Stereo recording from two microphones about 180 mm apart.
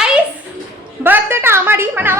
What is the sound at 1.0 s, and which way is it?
A woman's voice, 10° right (ahead or behind).